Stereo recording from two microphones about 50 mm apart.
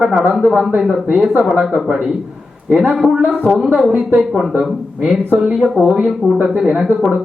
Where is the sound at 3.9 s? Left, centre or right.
Right.